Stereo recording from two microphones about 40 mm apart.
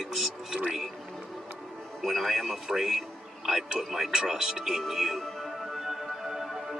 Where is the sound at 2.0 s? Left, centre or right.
Centre.